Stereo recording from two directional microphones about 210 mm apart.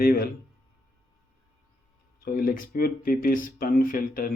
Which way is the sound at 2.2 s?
45° left (ahead or behind).